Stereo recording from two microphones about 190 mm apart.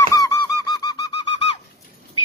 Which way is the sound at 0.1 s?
15° left (ahead or behind).